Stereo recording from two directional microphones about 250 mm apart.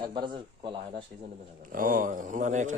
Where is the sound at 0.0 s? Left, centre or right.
Centre.